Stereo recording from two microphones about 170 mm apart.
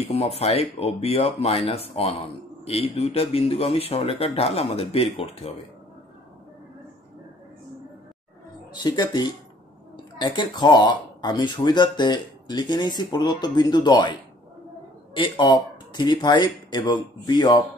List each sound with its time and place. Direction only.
0.0 s speech: 35° left (ahead or behind)
8.7 s speech: 25° left (ahead or behind)
15.1 s speech: 30° left (ahead or behind)